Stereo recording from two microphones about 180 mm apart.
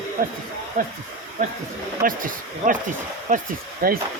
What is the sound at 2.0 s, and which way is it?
Speech, 50° right (ahead or behind).